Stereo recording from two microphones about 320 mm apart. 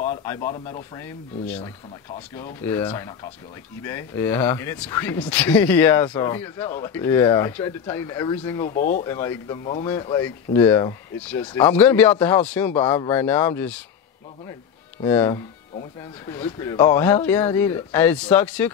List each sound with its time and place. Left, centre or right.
0.1 s a sound: centre
0.9 s speech: centre
8.7 s speech: left
9.0 s speech: centre
15.0 s speech: centre